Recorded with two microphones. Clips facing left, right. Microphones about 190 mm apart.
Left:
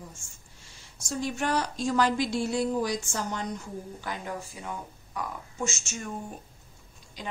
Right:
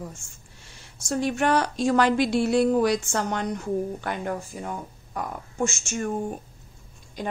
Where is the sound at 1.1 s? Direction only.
65° right (ahead or behind).